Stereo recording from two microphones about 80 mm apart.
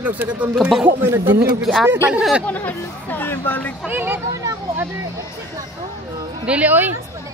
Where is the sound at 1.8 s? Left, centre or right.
Right.